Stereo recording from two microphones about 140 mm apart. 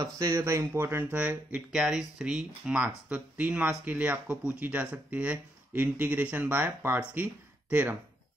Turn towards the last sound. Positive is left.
turn(degrees=-10)  # may be behind; listen again after turning